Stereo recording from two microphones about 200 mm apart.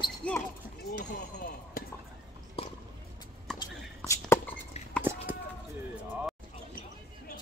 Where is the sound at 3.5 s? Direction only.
Centre (ahead or behind).